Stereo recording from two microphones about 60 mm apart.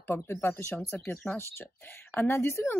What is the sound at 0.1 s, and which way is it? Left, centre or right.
Speech, left.